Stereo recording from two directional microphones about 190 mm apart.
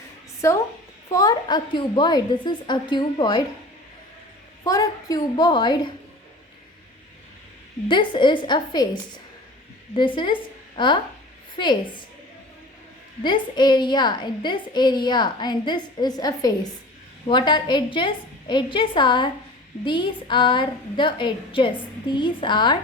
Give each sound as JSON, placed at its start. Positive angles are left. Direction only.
{"t": 0.4, "sound": "a woman's voice", "side_deg": 15}
{"t": 4.6, "sound": "a woman's voice", "side_deg": 20}
{"t": 7.9, "sound": "a woman's voice", "side_deg": 25}
{"t": 13.2, "sound": "a woman's voice", "side_deg": 25}